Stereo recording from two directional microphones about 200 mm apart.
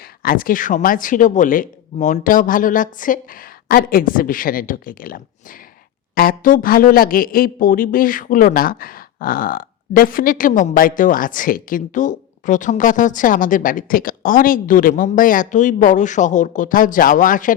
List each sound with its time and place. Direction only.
0.2 s speech: 45° left (ahead or behind)